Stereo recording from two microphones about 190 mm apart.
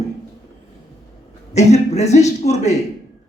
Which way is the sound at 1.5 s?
35° left (ahead or behind).